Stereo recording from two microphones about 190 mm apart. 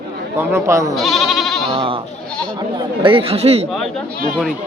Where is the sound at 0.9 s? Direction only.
Centre (ahead or behind).